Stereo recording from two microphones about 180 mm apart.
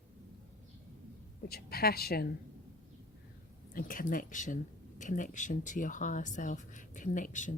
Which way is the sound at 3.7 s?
50° left (ahead or behind).